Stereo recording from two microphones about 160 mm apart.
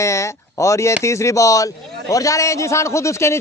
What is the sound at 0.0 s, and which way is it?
A man's voice, 20° left (ahead or behind).